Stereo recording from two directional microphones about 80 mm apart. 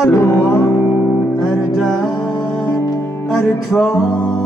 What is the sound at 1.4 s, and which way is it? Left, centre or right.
Music, centre.